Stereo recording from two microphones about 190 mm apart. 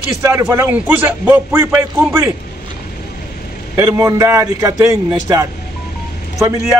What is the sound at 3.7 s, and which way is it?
A man's voice, 15° right (ahead or behind).